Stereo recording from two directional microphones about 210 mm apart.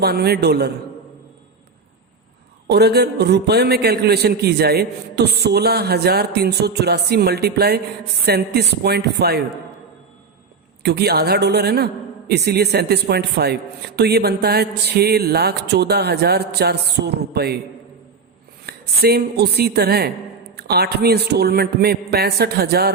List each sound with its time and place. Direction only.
0.0 s a man's voice: 50° right (ahead or behind)
2.6 s a man's voice: 50° right (ahead or behind)
10.8 s a man's voice: 50° right (ahead or behind)
18.6 s a man's voice: 50° right (ahead or behind)